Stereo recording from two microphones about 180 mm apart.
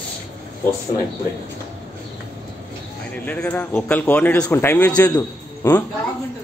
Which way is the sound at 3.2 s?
10° left (ahead or behind).